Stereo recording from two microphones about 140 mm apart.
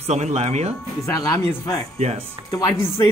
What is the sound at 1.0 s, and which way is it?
Speech, 25° left (ahead or behind).